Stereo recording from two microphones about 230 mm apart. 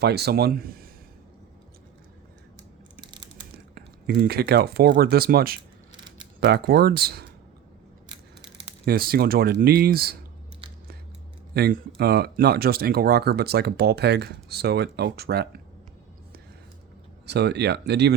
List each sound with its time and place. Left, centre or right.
0.0 s speech: right
3.0 s a sound: centre
3.8 s speech: right
8.4 s speech: right
11.5 s speech: right
17.2 s speech: right